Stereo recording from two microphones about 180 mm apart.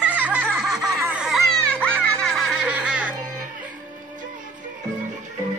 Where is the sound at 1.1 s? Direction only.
5° right (ahead or behind).